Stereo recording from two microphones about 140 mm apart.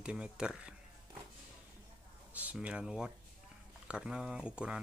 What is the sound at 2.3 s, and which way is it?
Speech, 10° right (ahead or behind).